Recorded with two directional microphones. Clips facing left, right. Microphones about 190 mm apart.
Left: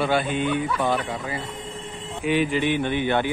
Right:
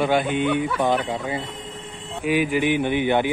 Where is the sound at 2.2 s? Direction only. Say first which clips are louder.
Right 1 dB; 10° right (ahead or behind).